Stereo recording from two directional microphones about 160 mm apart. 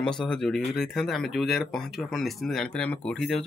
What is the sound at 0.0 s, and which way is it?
Speech, 5° left (ahead or behind).